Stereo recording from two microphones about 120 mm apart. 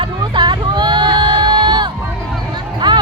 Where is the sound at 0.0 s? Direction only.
40° right (ahead or behind).